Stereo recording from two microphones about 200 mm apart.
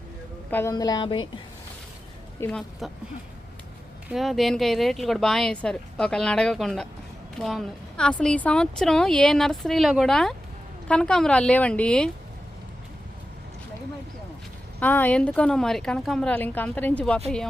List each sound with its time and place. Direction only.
0.5 s a woman's voice: 15° left (ahead or behind)
2.4 s speech: 5° left (ahead or behind)
4.1 s speech: centre (ahead or behind)
14.8 s speech: 10° left (ahead or behind)